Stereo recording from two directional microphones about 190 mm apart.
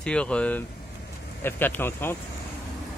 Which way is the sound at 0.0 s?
5° left (ahead or behind).